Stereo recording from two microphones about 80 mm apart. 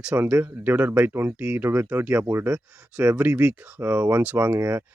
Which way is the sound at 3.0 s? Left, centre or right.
Right.